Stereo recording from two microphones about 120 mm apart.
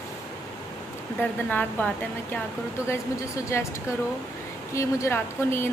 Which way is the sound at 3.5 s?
20° left (ahead or behind).